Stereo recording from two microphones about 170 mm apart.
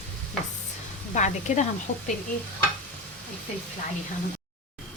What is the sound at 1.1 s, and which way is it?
Speech, 45° left (ahead or behind).